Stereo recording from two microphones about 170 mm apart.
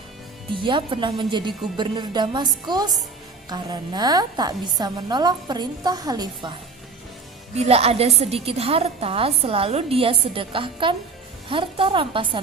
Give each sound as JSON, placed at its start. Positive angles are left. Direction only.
{"t": 0.5, "sound": "a woman's voice", "side_deg": -30}
{"t": 7.5, "sound": "a woman's voice", "side_deg": -35}